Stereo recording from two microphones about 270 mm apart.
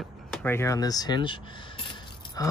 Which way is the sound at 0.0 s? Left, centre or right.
Centre.